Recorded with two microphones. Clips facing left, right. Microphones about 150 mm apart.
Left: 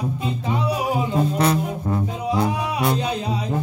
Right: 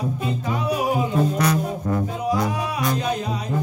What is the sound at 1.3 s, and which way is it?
Music, 25° left (ahead or behind).